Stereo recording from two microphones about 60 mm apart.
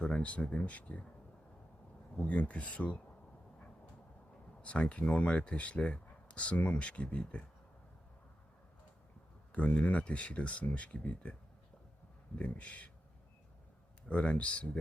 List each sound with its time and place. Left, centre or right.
0.0 s speech: left
2.1 s speech: left
4.6 s speech: centre
9.5 s speech: left
12.4 s speech: left
14.1 s speech: centre